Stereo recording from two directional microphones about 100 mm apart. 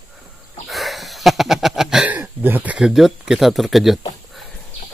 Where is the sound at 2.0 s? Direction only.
20° right (ahead or behind).